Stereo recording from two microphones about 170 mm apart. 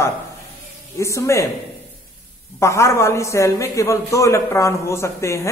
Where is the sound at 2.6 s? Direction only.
15° left (ahead or behind).